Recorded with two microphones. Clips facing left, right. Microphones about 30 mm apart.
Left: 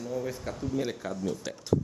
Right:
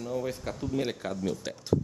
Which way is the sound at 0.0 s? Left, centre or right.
Centre.